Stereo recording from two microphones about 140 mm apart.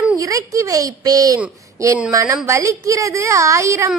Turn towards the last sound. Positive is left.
turn(degrees=-20)  # may be behind; listen again after turning